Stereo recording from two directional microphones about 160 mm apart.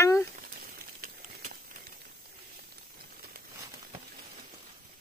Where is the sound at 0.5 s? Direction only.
65° right (ahead or behind).